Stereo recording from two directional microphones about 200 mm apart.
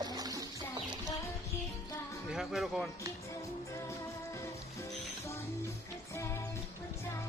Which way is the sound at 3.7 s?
15° left (ahead or behind).